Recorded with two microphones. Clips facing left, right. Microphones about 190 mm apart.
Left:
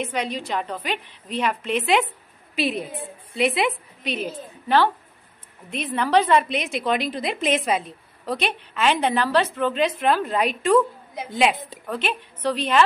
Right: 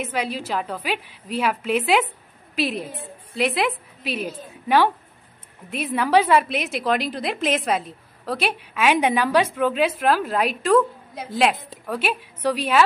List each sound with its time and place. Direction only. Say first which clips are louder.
0.0 s a woman's voice: even; 5° right (ahead or behind)